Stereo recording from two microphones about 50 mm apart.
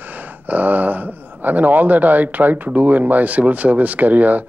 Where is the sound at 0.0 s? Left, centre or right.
Right.